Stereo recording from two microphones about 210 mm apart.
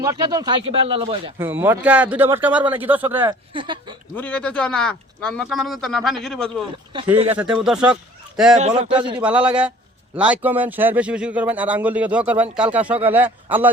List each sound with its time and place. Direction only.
0.0 s speech: 15° right (ahead or behind)
1.4 s a man's voice: 10° right (ahead or behind)
3.2 s speech: 25° right (ahead or behind)
4.1 s speech: 5° left (ahead or behind)
8.5 s a man's voice: 35° right (ahead or behind)
9.1 s a man's voice: 5° right (ahead or behind)